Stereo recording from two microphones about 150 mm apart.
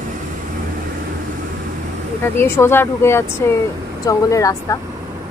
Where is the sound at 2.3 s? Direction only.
15° left (ahead or behind).